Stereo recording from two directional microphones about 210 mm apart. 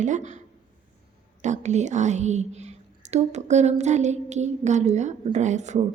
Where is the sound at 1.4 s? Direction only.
35° right (ahead or behind).